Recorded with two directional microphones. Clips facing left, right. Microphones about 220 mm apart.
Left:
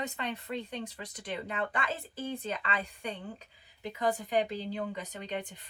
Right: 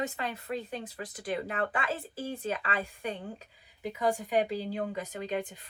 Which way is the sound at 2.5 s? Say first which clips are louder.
Right 2 dB; 45° right (ahead or behind).